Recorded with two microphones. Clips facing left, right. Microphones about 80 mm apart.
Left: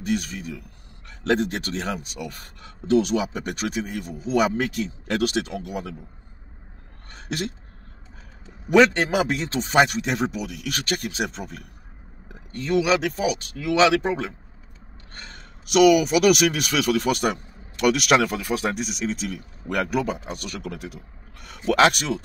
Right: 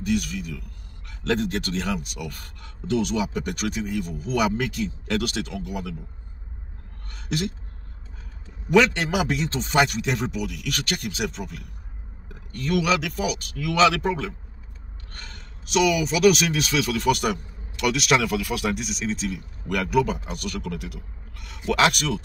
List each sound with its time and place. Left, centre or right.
0.0 s speech: left
4.1 s speech: left
8.7 s speech: left
12.5 s speech: left
15.7 s speech: left